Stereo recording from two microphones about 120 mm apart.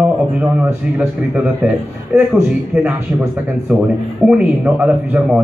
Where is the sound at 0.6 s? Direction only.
20° right (ahead or behind).